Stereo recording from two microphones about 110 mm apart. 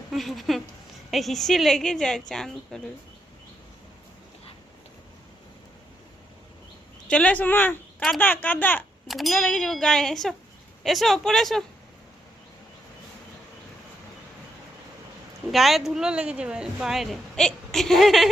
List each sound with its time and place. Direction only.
0.1 s speech: centre (ahead or behind)
7.1 s speech: 10° left (ahead or behind)
9.0 s speech: centre (ahead or behind)
15.5 s speech: centre (ahead or behind)